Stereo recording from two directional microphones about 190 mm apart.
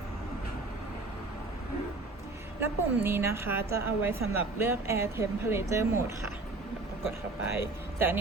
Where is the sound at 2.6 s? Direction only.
10° right (ahead or behind).